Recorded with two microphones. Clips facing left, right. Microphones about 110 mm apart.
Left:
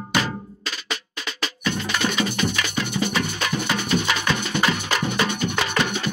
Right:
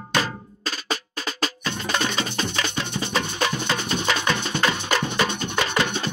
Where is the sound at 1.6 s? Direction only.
30° right (ahead or behind).